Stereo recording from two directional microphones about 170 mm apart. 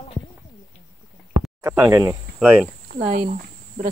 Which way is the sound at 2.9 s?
55° right (ahead or behind).